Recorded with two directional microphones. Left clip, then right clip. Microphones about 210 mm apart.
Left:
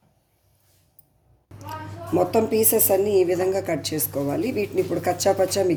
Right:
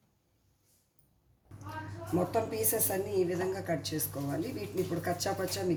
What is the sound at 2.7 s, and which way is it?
A woman's voice, 35° left (ahead or behind).